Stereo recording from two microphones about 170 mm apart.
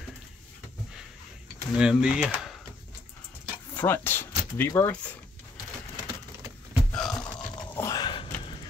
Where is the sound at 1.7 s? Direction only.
5° right (ahead or behind).